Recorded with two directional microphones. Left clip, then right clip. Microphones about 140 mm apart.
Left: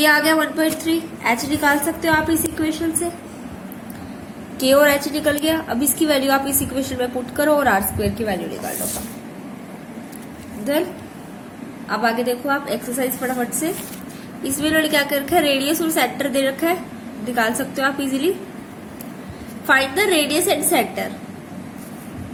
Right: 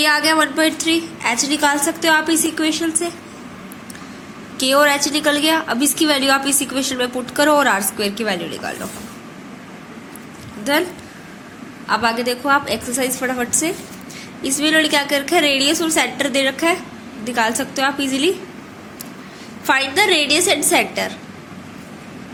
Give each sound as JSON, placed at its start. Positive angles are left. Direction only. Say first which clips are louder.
{"t": 0.0, "sound": "a woman's voice", "louder": "even", "side_deg": -30}
{"t": 4.5, "sound": "a woman's voice", "louder": "even", "side_deg": -25}
{"t": 10.6, "sound": "a woman's voice", "louder": "right 3 dB", "side_deg": -30}
{"t": 11.9, "sound": "a woman's voice", "louder": "right 2 dB", "side_deg": -25}
{"t": 14.4, "sound": "a woman's voice", "louder": "right 3 dB", "side_deg": -20}
{"t": 19.6, "sound": "a woman's voice", "louder": "right 1 dB", "side_deg": -20}